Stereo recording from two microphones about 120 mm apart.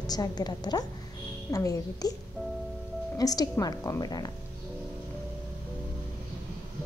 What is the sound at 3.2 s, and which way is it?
A woman's voice, 30° left (ahead or behind).